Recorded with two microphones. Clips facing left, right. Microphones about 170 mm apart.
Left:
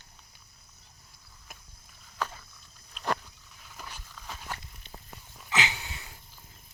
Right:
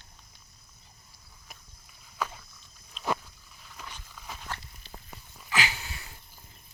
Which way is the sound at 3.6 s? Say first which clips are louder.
Even; 5° left (ahead or behind).